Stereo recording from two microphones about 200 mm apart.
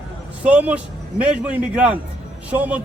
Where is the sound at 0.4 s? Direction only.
5° right (ahead or behind).